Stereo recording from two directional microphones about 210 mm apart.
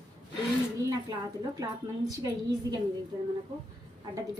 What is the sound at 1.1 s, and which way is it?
A woman's voice, 20° right (ahead or behind).